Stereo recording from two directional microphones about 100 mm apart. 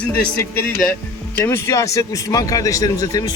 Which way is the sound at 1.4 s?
25° left (ahead or behind).